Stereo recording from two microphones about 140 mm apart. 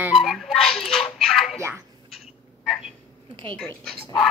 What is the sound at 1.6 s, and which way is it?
Speech, 20° right (ahead or behind).